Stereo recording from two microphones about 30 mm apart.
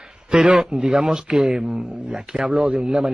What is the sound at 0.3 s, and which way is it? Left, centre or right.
Speech, right.